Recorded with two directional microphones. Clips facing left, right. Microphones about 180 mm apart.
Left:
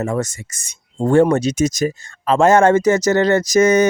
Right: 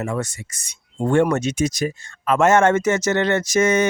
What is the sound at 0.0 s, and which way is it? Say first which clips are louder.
Speech: left 4 dB; 40° left (ahead or behind).